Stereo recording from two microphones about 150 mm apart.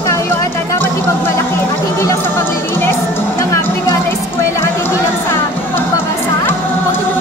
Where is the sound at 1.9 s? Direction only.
15° left (ahead or behind).